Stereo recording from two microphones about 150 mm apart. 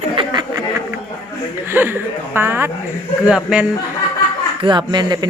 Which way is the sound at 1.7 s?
15° right (ahead or behind).